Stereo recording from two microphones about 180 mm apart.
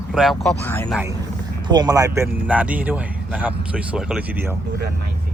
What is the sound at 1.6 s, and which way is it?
Speech, 20° right (ahead or behind).